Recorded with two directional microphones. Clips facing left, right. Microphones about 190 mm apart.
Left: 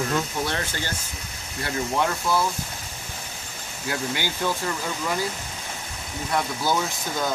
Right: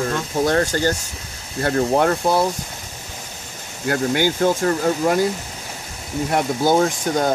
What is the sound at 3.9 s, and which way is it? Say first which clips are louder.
Speech: right 9 dB; 50° right (ahead or behind).